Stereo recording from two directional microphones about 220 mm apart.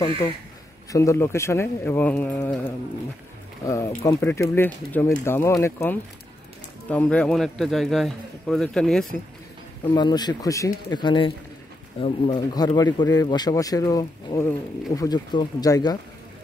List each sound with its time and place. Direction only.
0.9 s a man's voice: 15° left (ahead or behind)
9.8 s speech: 20° left (ahead or behind)